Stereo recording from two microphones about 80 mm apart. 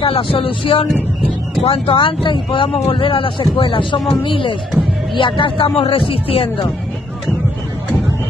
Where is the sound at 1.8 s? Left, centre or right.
Left.